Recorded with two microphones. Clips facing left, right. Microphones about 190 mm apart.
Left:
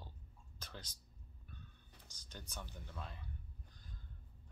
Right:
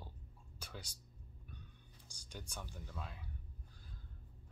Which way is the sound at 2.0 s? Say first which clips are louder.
Right 3 dB; 10° right (ahead or behind).